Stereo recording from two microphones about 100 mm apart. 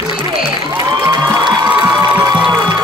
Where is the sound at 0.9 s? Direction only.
35° right (ahead or behind).